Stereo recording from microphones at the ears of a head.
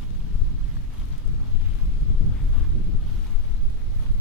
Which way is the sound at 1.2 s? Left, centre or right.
Left.